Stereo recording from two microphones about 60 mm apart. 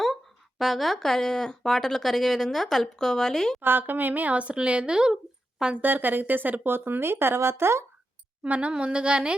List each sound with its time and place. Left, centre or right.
0.6 s speech: centre
3.6 s a woman's voice: right; by 5.8 s centre
5.8 s speech: right
8.4 s a woman's voice: right